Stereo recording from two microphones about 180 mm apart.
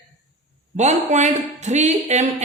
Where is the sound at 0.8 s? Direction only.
40° right (ahead or behind).